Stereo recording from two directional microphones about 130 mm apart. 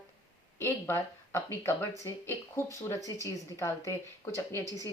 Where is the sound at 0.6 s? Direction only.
20° left (ahead or behind).